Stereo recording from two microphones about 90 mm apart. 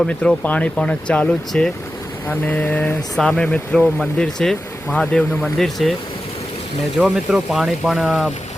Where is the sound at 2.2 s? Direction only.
20° left (ahead or behind); by 5.9 s 5° left (ahead or behind).